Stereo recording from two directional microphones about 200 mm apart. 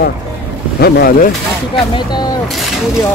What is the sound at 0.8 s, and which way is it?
Speech, 50° left (ahead or behind).